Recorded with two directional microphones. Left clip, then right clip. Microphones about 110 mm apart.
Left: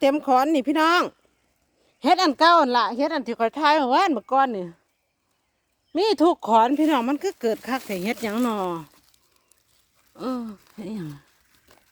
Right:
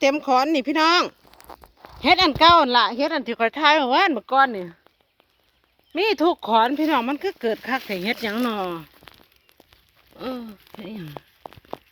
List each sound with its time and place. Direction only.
0.0 s speech: 30° left (ahead or behind)
4.3 s speech: 50° left (ahead or behind)
5.9 s speech: 70° left (ahead or behind); by 8.9 s 45° left (ahead or behind)